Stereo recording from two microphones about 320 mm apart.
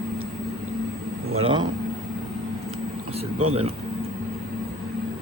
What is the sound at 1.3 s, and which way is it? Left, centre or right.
Speech, centre.